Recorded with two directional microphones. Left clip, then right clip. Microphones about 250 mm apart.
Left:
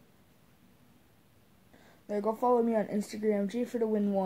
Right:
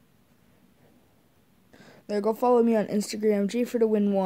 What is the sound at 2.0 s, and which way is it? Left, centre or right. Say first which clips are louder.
Speech: right 5 dB; right.